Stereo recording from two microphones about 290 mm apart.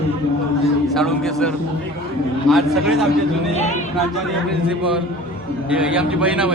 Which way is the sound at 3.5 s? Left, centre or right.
Left.